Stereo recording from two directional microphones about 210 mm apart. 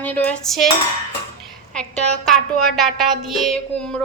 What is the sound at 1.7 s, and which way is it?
A woman's voice, 5° left (ahead or behind).